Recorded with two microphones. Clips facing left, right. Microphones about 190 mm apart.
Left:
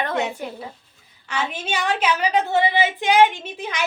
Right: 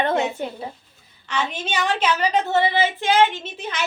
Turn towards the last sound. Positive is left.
turn(degrees=10)  # may be behind; listen again after turning